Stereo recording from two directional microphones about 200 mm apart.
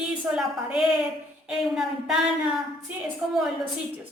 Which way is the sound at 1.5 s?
Centre (ahead or behind).